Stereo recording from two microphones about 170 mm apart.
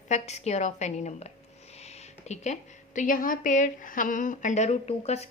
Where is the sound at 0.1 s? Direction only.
40° left (ahead or behind).